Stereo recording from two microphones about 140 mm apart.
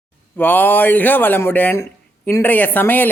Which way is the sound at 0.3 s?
15° left (ahead or behind).